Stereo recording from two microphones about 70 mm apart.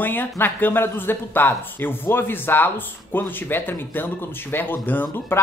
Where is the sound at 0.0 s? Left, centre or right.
Left.